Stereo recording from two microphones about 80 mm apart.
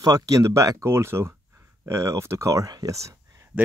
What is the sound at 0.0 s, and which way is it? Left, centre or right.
Speech, right.